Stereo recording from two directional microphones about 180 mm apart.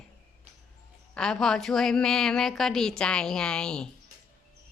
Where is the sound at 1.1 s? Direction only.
5° left (ahead or behind).